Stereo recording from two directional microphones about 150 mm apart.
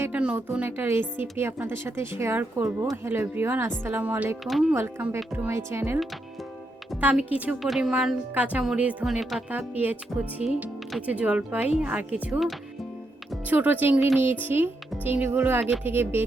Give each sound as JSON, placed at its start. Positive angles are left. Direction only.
{"t": 0.0, "sound": "speech", "side_deg": -10}
{"t": 4.4, "sound": "speech", "side_deg": 0}
{"t": 4.7, "sound": "speech", "side_deg": -15}